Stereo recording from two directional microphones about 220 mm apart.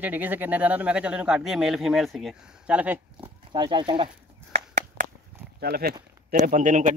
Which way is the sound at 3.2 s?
20° right (ahead or behind).